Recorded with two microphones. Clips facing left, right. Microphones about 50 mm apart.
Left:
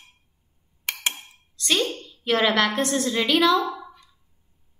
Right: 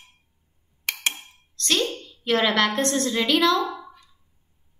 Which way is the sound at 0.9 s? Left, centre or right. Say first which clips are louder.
Right 1 dB; left.